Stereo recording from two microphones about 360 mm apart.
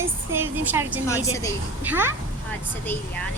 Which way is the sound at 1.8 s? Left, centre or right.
Centre.